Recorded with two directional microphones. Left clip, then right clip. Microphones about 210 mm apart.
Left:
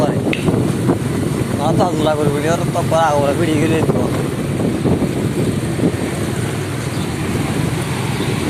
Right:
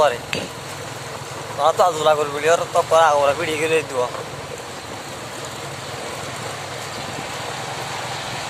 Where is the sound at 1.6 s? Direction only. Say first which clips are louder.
Right 1 dB; 25° right (ahead or behind).